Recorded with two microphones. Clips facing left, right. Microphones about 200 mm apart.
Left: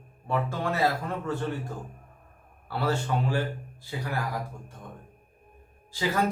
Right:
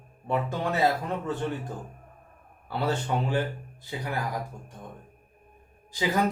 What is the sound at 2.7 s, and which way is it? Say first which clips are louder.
Speech: even; 20° right (ahead or behind).